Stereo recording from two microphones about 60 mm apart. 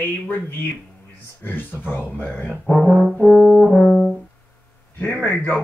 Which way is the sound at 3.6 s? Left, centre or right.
Centre.